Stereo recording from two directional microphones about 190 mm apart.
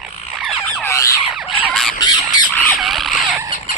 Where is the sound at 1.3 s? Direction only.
Centre (ahead or behind).